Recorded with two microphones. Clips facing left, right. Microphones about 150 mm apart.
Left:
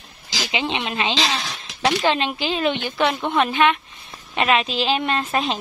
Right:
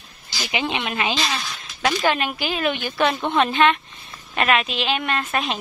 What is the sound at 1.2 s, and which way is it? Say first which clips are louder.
Speech: left 2 dB; 90° left.